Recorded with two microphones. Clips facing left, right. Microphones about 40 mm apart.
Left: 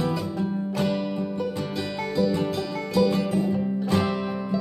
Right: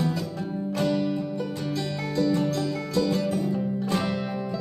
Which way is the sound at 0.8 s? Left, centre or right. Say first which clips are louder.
Right 1 dB; centre.